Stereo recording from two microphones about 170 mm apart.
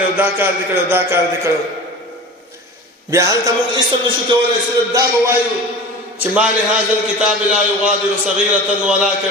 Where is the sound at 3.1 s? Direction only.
20° right (ahead or behind).